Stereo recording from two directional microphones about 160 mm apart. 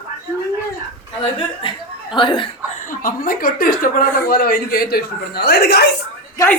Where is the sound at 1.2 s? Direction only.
30° left (ahead or behind).